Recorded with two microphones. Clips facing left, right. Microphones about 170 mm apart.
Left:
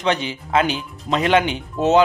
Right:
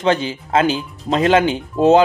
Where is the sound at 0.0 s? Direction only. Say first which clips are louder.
Right 4 dB; 35° right (ahead or behind).